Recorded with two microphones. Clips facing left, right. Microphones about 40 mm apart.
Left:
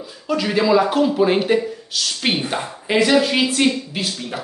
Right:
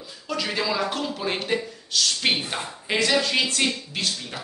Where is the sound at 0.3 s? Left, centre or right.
Centre.